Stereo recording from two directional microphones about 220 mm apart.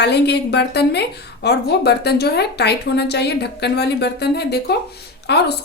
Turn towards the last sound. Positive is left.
turn(degrees=50)  # may be behind; listen again after turning